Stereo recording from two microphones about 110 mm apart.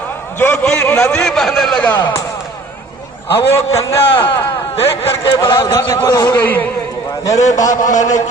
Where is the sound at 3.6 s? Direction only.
70° left (ahead or behind).